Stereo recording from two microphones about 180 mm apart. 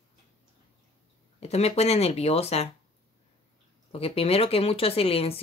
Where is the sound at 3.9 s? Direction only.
35° left (ahead or behind).